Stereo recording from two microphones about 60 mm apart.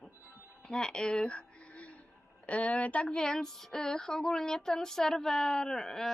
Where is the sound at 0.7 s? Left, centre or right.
Centre.